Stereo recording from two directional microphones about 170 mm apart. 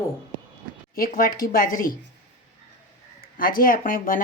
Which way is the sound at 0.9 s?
60° left (ahead or behind).